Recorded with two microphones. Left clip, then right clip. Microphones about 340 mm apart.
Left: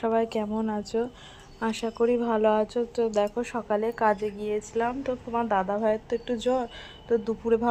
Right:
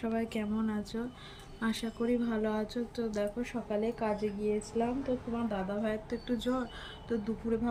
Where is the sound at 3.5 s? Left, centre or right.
Left.